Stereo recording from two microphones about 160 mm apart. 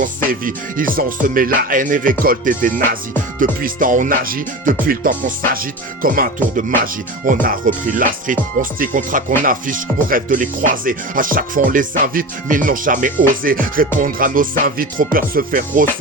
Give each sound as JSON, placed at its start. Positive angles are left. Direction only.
{"t": 0.3, "sound": "speech", "side_deg": -60}